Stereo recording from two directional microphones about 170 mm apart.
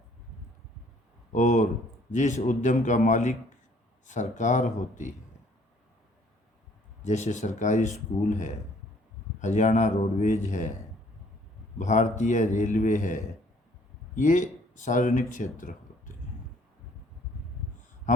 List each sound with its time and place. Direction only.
1.3 s speech: 45° left (ahead or behind)
7.0 s speech: 45° left (ahead or behind)
11.8 s speech: 45° left (ahead or behind)
15.5 s a sound: 50° left (ahead or behind)